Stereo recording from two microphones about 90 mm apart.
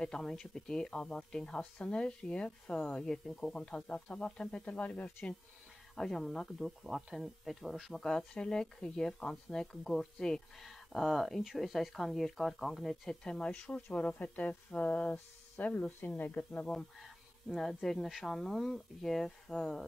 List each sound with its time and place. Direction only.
0.0 s speech: 5° left (ahead or behind)
5.9 s speech: 5° left (ahead or behind); by 16.6 s 20° left (ahead or behind)
16.6 s speech: 5° left (ahead or behind)